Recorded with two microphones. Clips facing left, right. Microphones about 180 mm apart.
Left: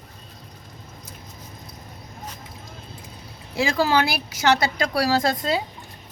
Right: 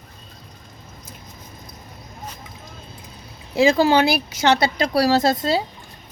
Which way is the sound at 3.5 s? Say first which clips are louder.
Right 5 dB; 20° right (ahead or behind).